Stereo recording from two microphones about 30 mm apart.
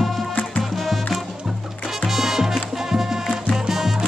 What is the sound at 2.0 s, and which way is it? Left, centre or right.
Music, centre.